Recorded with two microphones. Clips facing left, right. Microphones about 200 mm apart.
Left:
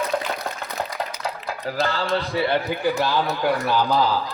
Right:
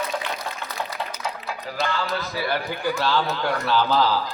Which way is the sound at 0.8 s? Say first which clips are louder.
Left 2 dB; 45° left (ahead or behind).